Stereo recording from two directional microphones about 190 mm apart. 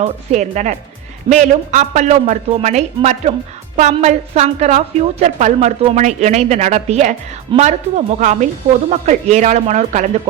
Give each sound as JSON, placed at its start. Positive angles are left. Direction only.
{"t": 0.0, "sound": "a woman's voice", "side_deg": -35}